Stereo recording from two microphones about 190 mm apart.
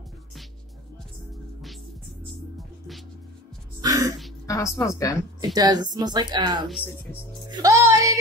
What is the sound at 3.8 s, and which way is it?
Music, 15° right (ahead or behind).